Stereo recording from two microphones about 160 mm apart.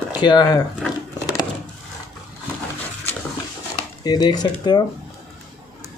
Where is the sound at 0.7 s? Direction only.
5° left (ahead or behind).